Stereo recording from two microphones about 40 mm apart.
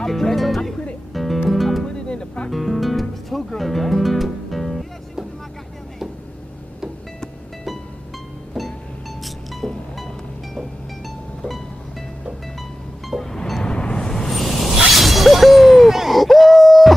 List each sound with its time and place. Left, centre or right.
0.0 s speech: centre
1.1 s music: centre
1.9 s music: left
2.5 s music: centre
8.6 s music: centre
13.2 s music: centre
14.3 s a sound: centre
15.0 s shatter: centre
16.0 s a sound: centre